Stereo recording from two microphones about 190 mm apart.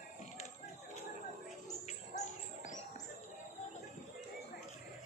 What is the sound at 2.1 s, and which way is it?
Bird, 40° left (ahead or behind).